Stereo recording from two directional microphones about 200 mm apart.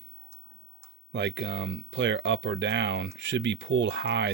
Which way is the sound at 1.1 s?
65° right (ahead or behind).